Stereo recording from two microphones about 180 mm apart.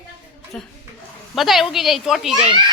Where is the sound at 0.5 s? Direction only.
5° left (ahead or behind).